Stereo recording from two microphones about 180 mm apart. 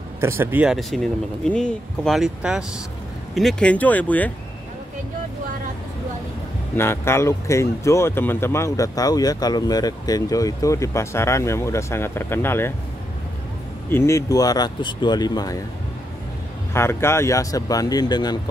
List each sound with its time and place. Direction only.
0.2 s speech: 15° right (ahead or behind); by 4.3 s 10° left (ahead or behind)
6.8 s speech: 15° left (ahead or behind)
13.8 s speech: 15° left (ahead or behind)
16.7 s speech: 15° left (ahead or behind)